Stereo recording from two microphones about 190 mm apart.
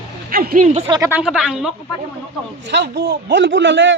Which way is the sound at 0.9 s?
15° right (ahead or behind).